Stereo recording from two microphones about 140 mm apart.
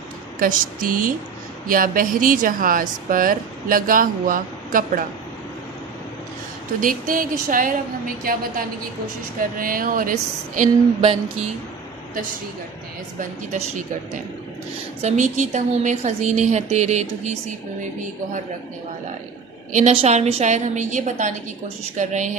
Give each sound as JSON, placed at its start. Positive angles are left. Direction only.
{"t": 0.3, "sound": "a woman's voice", "side_deg": -80}
{"t": 1.6, "sound": "a woman's voice", "side_deg": -90}
{"t": 6.7, "sound": "a woman's voice", "side_deg": -75}
{"t": 15.0, "sound": "a woman's voice", "side_deg": -60}
{"t": 19.7, "sound": "a woman's voice", "side_deg": -55}